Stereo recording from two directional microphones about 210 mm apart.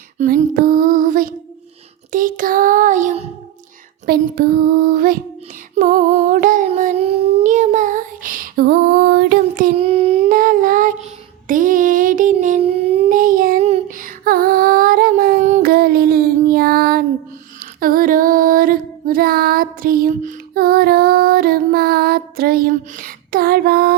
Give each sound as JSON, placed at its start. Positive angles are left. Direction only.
{"t": 0.2, "sound": "female singing", "side_deg": -40}
{"t": 2.1, "sound": "child singing", "side_deg": -40}
{"t": 4.0, "sound": "a sound", "side_deg": -45}
{"t": 5.7, "sound": "child singing", "side_deg": -35}
{"t": 9.7, "sound": "a sound", "side_deg": -25}
{"t": 10.2, "sound": "humming", "side_deg": -40}
{"t": 11.4, "sound": "a sound", "side_deg": -40}
{"t": 13.1, "sound": "child singing", "side_deg": -40}
{"t": 17.6, "sound": "music", "side_deg": -45}